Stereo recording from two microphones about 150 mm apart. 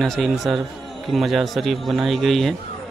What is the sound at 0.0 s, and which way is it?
A man's voice, centre (ahead or behind).